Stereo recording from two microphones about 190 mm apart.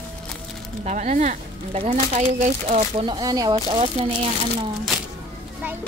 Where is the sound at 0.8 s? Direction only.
40° right (ahead or behind).